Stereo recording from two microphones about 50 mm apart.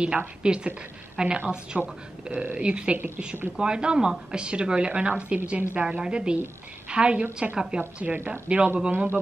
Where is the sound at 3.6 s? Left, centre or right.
Centre.